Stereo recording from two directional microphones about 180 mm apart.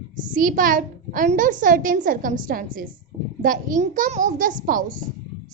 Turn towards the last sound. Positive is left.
turn(degrees=-50)  # may be behind; listen again after turning